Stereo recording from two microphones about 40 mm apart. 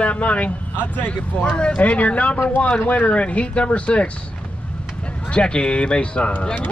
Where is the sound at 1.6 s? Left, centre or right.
Left.